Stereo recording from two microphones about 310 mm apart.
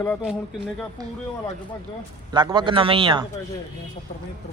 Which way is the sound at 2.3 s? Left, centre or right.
Centre.